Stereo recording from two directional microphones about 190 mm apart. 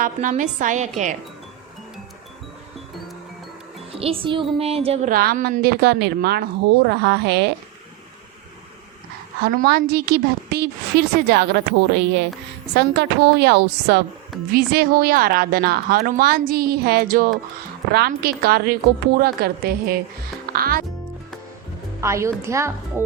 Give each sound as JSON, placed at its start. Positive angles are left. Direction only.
{"t": 0.0, "sound": "a woman's voice", "side_deg": -45}
{"t": 4.0, "sound": "a woman's voice", "side_deg": -30}
{"t": 5.1, "sound": "a woman's voice", "side_deg": -50}
{"t": 9.4, "sound": "a woman's voice", "side_deg": -50}
{"t": 22.0, "sound": "a woman's voice", "side_deg": -15}